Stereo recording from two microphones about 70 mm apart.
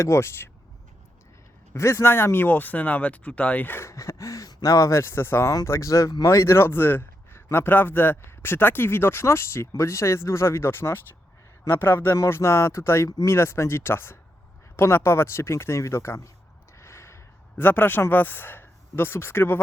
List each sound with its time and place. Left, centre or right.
0.0 s a man's voice: left
1.7 s speech: left
3.8 s a man's voice: left
16.7 s a sound: left
17.6 s a man's voice: left